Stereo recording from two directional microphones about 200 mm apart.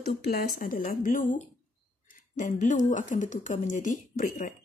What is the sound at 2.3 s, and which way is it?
A woman's voice, 40° left (ahead or behind).